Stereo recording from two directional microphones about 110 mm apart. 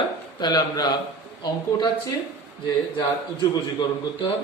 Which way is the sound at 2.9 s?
45° left (ahead or behind).